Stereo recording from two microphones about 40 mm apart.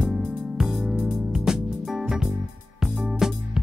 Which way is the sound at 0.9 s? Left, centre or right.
Right.